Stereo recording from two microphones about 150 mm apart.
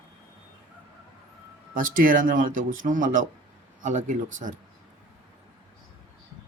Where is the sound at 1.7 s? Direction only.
70° right (ahead or behind).